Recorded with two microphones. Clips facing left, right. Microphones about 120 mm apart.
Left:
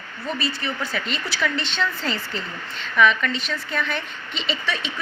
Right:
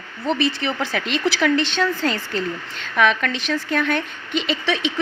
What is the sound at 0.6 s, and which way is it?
Speech, 90° right.